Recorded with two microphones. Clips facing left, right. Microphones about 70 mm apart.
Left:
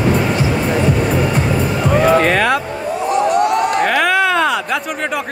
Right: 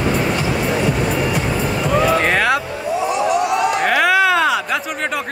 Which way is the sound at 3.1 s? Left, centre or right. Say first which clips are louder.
Left 5 dB; left.